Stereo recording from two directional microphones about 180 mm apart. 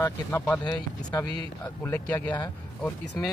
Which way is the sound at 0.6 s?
20° left (ahead or behind).